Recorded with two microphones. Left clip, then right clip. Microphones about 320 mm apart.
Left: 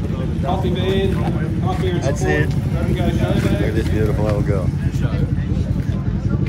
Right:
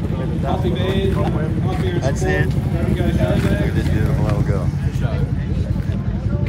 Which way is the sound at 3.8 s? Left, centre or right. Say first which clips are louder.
Left 3 dB; centre.